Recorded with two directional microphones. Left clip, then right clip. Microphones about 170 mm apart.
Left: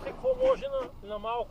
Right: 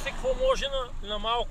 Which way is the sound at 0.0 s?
40° left (ahead or behind).